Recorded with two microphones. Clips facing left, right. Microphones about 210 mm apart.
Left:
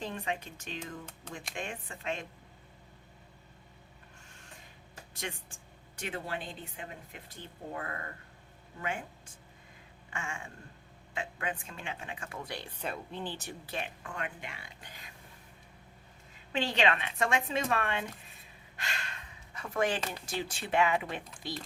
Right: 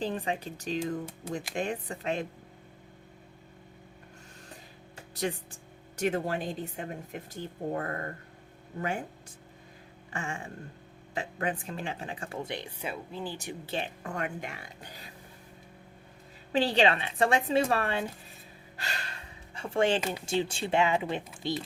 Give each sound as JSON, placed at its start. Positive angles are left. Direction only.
{"t": 0.0, "sound": "speech", "side_deg": -35}
{"t": 5.1, "sound": "speech", "side_deg": -35}
{"t": 10.1, "sound": "a sound", "side_deg": -35}
{"t": 11.1, "sound": "speech", "side_deg": -35}
{"t": 12.8, "sound": "speech", "side_deg": -5}
{"t": 13.7, "sound": "speech", "side_deg": -30}
{"t": 16.5, "sound": "speech", "side_deg": -35}
{"t": 18.8, "sound": "gasp", "side_deg": -35}
{"t": 20.2, "sound": "speech", "side_deg": -25}